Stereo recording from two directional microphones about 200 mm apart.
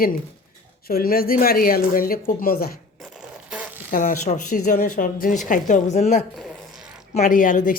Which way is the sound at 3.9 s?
40° left (ahead or behind).